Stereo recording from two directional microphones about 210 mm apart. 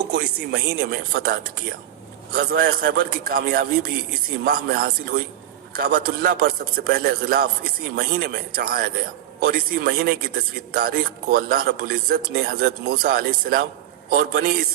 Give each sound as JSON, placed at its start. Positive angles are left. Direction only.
{"t": 0.1, "sound": "speech", "side_deg": -50}